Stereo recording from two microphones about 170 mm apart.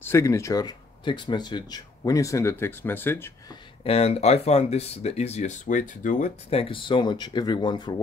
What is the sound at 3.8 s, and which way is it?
Speech, 35° left (ahead or behind).